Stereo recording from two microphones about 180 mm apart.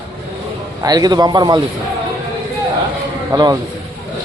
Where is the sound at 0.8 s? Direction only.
20° right (ahead or behind).